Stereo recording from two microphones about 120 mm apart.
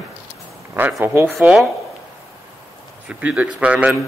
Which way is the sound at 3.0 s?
10° right (ahead or behind).